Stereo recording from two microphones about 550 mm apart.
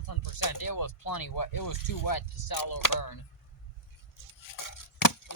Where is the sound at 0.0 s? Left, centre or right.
Left.